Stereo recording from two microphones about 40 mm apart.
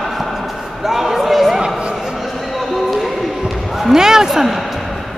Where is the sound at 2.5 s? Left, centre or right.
Centre.